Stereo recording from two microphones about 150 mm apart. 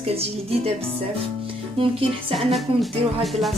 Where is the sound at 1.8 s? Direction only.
40° right (ahead or behind).